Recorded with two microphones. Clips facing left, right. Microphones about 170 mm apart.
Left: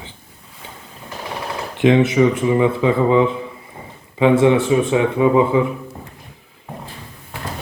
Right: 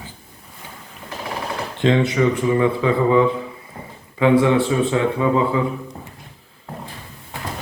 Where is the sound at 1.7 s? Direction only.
15° left (ahead or behind).